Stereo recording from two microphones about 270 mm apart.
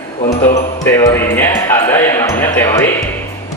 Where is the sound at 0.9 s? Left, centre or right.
Centre.